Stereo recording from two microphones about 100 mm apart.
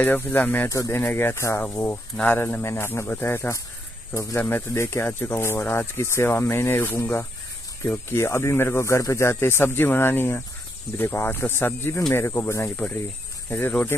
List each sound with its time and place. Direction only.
0.0 s speech: 20° left (ahead or behind)
0.7 s speech: 30° left (ahead or behind)